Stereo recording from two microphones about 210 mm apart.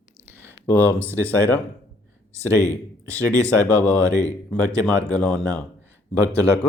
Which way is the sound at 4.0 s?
15° right (ahead or behind).